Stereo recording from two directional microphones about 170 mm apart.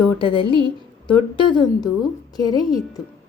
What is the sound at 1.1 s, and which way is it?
Speech, 30° left (ahead or behind).